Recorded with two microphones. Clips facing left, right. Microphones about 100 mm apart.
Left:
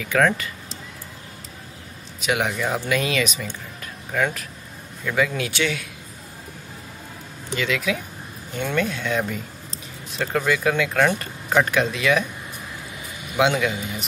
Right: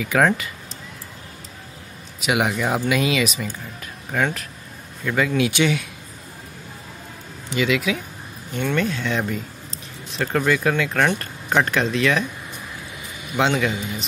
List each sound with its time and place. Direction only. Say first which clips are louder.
0.0 s speech: right 1 dB; 5° right (ahead or behind)
2.1 s speech: right 2 dB; 5° right (ahead or behind)
5.0 s speech: even; centre (ahead or behind)
5.4 s speech: right 5 dB; 15° right (ahead or behind)
7.5 s speech: right 3 dB; 10° right (ahead or behind)
8.5 s a man's voice: right 2 dB; 10° left (ahead or behind)
10.1 s speech: right 2 dB; 5° left (ahead or behind)
13.4 s a man's voice: even; 5° left (ahead or behind)